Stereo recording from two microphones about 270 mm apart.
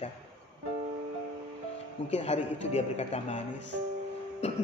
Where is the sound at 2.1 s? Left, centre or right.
Left.